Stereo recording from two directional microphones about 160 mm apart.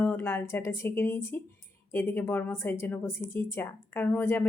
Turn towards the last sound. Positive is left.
turn(degrees=15)  # may be behind; listen again after turning